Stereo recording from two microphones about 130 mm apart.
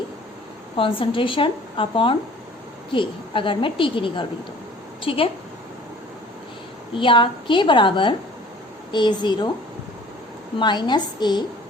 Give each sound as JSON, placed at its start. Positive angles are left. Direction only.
{"t": 0.8, "sound": "a woman's voice", "side_deg": 45}
{"t": 6.9, "sound": "a woman's voice", "side_deg": 40}
{"t": 10.6, "sound": "a woman's voice", "side_deg": 35}